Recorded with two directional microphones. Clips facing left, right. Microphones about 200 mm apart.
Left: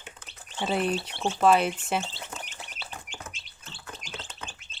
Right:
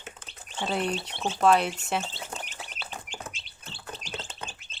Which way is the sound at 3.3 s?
30° right (ahead or behind).